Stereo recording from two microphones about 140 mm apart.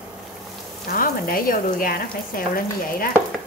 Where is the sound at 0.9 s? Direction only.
90° left.